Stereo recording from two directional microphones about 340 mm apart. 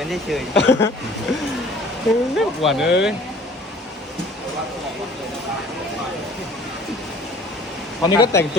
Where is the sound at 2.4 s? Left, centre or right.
Centre.